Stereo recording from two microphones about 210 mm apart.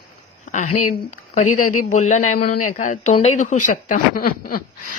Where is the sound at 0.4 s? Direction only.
35° left (ahead or behind).